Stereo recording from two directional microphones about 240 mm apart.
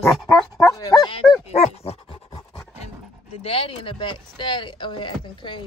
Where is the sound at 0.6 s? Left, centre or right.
Centre.